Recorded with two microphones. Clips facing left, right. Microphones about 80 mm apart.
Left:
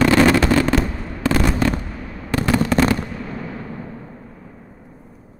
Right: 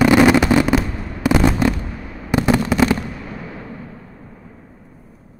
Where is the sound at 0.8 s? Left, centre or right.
Centre.